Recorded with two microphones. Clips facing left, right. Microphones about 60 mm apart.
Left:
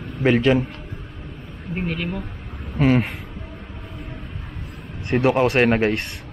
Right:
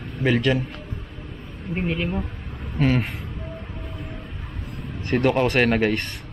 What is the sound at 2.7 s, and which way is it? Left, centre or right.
Speech, centre.